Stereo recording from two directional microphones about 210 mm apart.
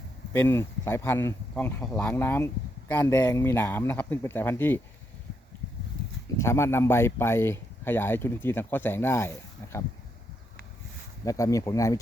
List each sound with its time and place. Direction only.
0.3 s speech: 10° left (ahead or behind)
6.4 s speech: 10° left (ahead or behind)
11.3 s speech: 15° left (ahead or behind)